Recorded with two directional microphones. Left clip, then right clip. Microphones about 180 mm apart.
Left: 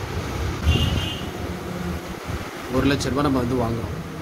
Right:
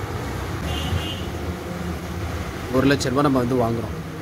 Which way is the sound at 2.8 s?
20° right (ahead or behind).